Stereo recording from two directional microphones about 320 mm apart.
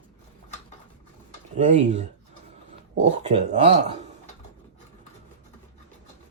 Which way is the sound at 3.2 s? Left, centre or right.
Right.